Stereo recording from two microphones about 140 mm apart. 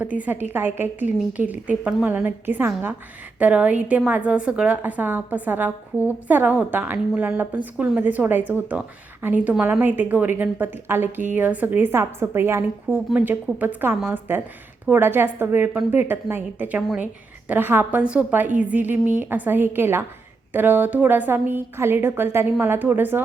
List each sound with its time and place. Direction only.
0.5 s a woman's voice: 15° right (ahead or behind)